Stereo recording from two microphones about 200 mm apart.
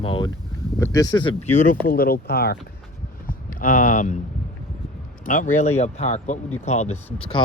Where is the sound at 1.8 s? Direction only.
50° left (ahead or behind).